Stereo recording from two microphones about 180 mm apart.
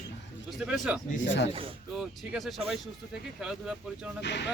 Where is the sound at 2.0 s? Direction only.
Centre (ahead or behind).